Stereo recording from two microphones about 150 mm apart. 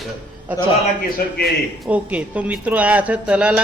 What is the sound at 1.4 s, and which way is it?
A man's voice, 5° right (ahead or behind).